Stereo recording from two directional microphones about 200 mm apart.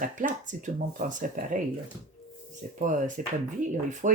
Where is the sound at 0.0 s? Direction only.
40° right (ahead or behind).